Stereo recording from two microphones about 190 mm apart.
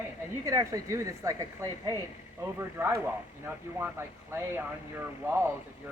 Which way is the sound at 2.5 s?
10° right (ahead or behind).